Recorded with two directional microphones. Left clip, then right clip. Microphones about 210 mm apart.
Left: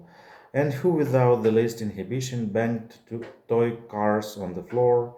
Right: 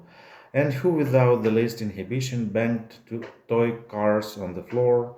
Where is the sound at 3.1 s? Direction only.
5° left (ahead or behind).